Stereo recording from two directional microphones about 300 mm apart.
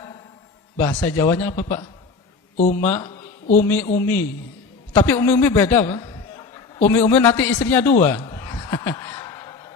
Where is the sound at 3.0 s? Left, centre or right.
Left.